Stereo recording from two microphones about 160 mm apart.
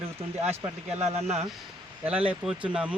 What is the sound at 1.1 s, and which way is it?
Speech, 40° right (ahead or behind).